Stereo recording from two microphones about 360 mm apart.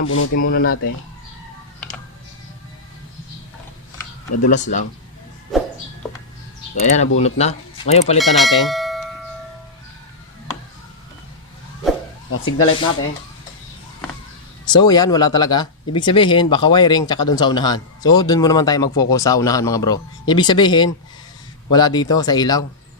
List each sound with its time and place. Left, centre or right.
0.0 s speech: left
4.4 s speech: centre
5.5 s a sound: centre
6.7 s speech: centre
8.2 s speech: centre
12.3 s speech: left
14.6 s speech: centre